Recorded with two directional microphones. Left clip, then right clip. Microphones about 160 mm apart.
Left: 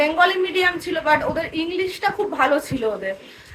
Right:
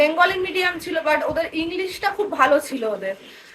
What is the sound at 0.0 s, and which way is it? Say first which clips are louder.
A woman's voice: even; 5° right (ahead or behind).